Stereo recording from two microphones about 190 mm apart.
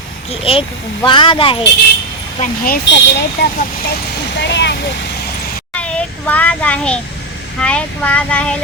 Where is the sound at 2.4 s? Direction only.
50° left (ahead or behind).